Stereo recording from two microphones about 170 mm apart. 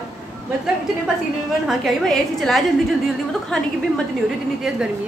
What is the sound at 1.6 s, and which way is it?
A woman's voice, centre (ahead or behind).